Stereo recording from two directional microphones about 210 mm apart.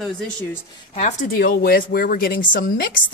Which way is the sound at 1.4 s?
45° left (ahead or behind).